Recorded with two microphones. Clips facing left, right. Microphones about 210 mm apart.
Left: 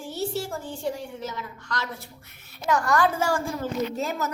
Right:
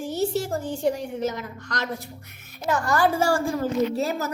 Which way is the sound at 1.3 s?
45° right (ahead or behind).